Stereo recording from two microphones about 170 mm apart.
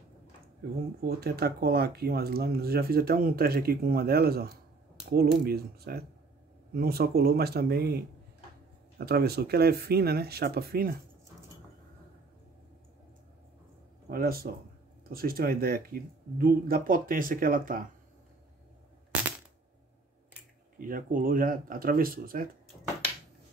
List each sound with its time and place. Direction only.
1.0 s speech: 65° right (ahead or behind)
14.0 s speech: 60° right (ahead or behind)
20.8 s speech: 55° right (ahead or behind)